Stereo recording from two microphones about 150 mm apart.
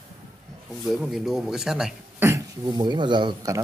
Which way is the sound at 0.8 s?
5° right (ahead or behind).